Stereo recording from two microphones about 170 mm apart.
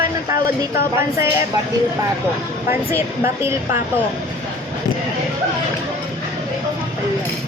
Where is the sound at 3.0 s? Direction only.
15° right (ahead or behind).